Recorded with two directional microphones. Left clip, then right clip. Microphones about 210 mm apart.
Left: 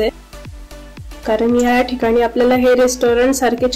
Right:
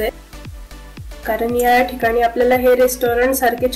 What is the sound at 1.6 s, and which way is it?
Speech, 45° left (ahead or behind).